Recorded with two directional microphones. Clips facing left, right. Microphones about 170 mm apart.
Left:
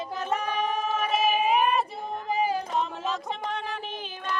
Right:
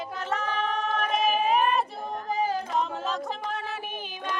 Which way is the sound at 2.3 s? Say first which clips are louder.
Left 1 dB; 15° left (ahead or behind).